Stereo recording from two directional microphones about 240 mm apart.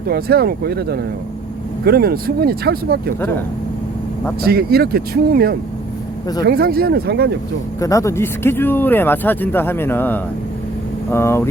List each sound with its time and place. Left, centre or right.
0.1 s speech: right
4.4 s speech: right
7.8 s speech: centre